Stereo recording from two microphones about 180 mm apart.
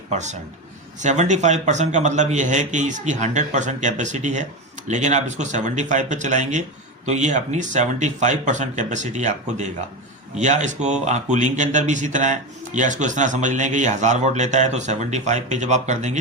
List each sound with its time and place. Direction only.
0.1 s speech: 40° right (ahead or behind)